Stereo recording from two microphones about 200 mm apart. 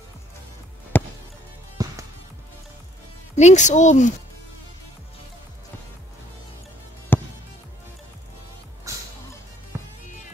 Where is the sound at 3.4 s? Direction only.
35° left (ahead or behind).